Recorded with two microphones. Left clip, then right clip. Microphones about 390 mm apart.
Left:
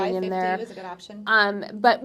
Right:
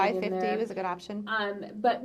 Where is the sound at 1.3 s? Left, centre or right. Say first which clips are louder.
Left 11 dB; left.